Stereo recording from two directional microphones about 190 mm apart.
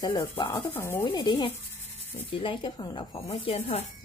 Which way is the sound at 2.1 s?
25° left (ahead or behind).